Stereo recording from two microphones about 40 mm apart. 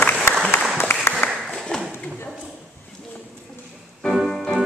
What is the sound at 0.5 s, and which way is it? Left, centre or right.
Applause, left.